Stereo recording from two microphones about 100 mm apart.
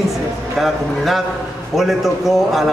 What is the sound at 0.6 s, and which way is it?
A man's voice, centre (ahead or behind).